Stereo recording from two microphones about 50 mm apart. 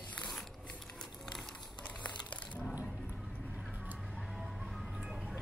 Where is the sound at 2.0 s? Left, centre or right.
Left.